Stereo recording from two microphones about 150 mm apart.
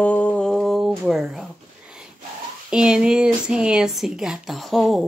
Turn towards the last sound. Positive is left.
turn(degrees=0)  # may be behind; listen again after turning